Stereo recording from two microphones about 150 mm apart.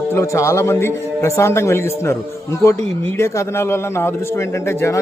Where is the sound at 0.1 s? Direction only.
20° left (ahead or behind).